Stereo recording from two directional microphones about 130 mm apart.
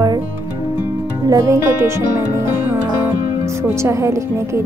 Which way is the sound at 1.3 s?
20° right (ahead or behind).